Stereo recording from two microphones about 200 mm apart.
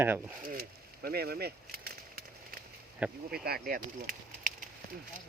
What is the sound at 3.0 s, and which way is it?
Speech, 5° right (ahead or behind).